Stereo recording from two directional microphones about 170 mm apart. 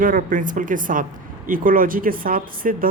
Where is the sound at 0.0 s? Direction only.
50° right (ahead or behind).